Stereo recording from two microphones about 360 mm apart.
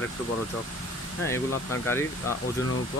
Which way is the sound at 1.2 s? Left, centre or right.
Centre.